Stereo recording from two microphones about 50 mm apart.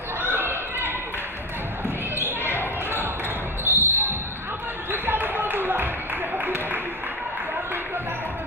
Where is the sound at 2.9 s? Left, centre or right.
Right.